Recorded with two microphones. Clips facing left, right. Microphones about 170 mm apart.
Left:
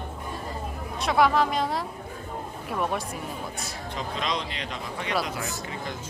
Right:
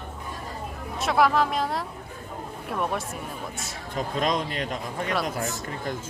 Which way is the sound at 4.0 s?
45° right (ahead or behind).